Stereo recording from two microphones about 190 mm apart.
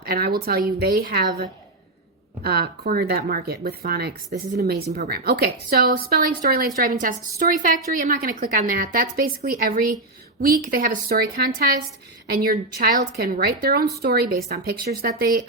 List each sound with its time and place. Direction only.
0.0 s a woman's voice: 55° right (ahead or behind)